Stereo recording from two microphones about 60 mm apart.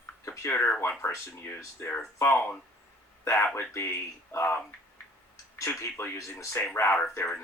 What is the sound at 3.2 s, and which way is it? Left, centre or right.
Speech, left.